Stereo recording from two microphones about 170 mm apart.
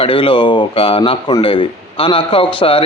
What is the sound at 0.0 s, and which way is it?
Speech, 30° left (ahead or behind).